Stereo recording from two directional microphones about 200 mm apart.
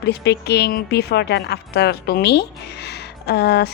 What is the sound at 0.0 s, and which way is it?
A woman's voice, 55° left (ahead or behind).